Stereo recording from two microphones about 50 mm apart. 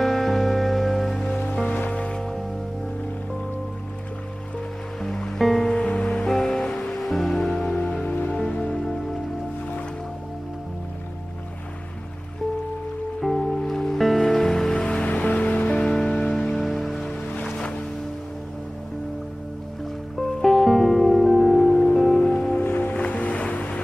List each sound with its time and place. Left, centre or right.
0.0 s music: centre
1.9 s music: left
5.0 s music: centre
7.7 s music: centre
8.0 s music: left
8.5 s music: centre
13.2 s music: centre
15.0 s music: left
16.3 s music: centre
20.2 s music: centre
22.2 s music: centre
22.6 s music: left
22.9 s ocean: left